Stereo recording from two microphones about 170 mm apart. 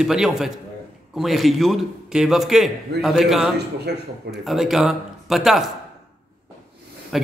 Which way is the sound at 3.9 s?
75° right (ahead or behind).